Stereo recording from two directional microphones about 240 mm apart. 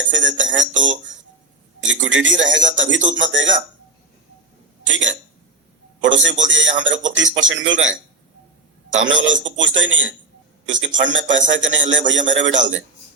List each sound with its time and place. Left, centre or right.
0.1 s a man's voice: right
6.0 s a man's voice: right
9.0 s a man's voice: right